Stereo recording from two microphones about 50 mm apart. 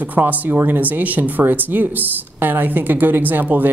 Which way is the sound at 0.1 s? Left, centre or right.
Right.